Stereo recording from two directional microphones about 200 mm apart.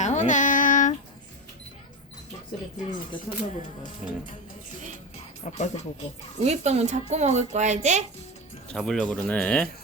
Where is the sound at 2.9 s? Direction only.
40° left (ahead or behind).